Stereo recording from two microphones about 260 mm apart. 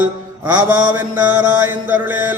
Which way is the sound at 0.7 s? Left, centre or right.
Centre.